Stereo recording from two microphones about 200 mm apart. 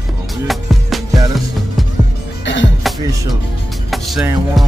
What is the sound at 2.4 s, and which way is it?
Music, 65° left (ahead or behind).